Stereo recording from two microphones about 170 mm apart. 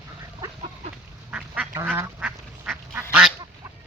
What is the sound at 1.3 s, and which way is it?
Duck, 5° right (ahead or behind).